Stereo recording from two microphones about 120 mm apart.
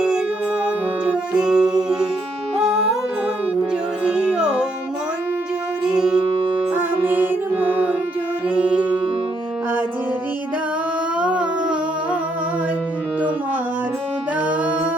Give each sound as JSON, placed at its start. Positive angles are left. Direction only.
{"t": 0.6, "sound": "music", "side_deg": -10}
{"t": 4.0, "sound": "music", "side_deg": -10}
{"t": 5.8, "sound": "music", "side_deg": -5}
{"t": 11.2, "sound": "humming", "side_deg": -10}
{"t": 14.4, "sound": "music", "side_deg": -10}